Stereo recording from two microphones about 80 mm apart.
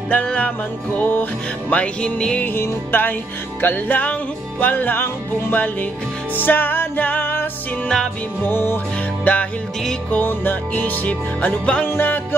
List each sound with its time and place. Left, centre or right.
0.1 s music: centre
1.7 s music: centre
2.4 s music: left
8.5 s music: left
9.2 s music: centre